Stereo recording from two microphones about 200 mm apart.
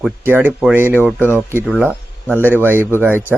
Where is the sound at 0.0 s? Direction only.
10° right (ahead or behind).